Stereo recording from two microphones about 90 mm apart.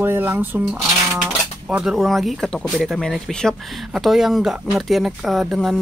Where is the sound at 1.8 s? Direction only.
Centre (ahead or behind).